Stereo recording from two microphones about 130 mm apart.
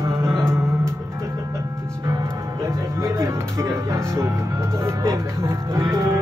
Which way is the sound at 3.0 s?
20° right (ahead or behind).